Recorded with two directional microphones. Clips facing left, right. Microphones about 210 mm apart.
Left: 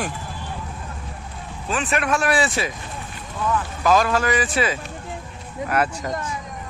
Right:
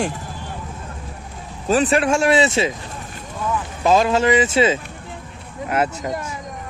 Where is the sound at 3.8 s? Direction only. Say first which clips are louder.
Right 3 dB; 25° right (ahead or behind).